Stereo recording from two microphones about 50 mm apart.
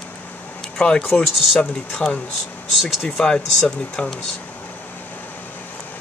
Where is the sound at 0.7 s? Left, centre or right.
Centre.